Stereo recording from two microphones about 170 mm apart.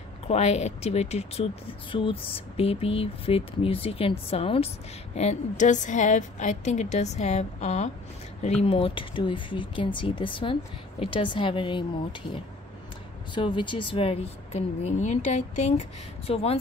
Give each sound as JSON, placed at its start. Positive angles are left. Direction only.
{"t": 0.3, "sound": "a woman's voice", "side_deg": 40}